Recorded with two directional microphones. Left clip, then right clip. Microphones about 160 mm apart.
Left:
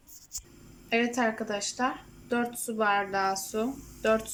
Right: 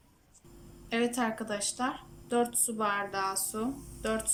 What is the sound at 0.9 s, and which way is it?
Speech, 20° left (ahead or behind).